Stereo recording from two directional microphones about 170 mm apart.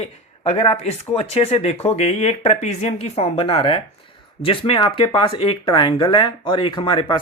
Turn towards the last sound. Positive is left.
turn(degrees=30)  # may be behind; listen again after turning